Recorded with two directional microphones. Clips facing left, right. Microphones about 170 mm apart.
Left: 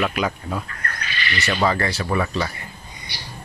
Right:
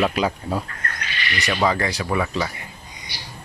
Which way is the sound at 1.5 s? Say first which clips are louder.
Even; 10° right (ahead or behind).